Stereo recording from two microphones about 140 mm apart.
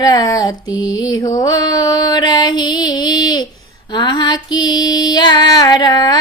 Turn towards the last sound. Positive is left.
turn(degrees=30)  # may be behind; listen again after turning